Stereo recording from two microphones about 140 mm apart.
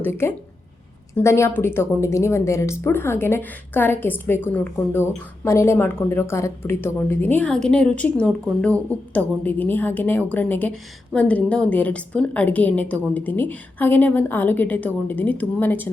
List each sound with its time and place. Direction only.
0.0 s a woman's voice: 15° left (ahead or behind)